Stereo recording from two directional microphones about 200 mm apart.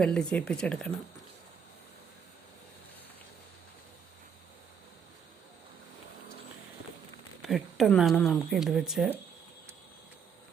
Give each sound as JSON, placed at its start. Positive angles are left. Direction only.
{"t": 0.0, "sound": "speech", "side_deg": 5}
{"t": 7.4, "sound": "speech", "side_deg": 0}